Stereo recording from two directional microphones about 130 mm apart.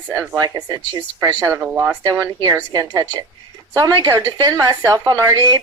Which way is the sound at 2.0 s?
30° right (ahead or behind).